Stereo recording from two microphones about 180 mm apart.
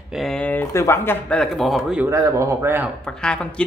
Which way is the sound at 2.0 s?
15° right (ahead or behind).